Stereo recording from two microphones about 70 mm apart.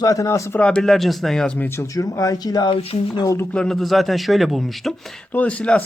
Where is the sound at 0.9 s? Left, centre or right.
Centre.